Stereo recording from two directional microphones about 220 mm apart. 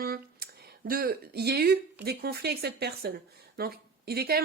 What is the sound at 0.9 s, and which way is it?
Speech, 45° right (ahead or behind).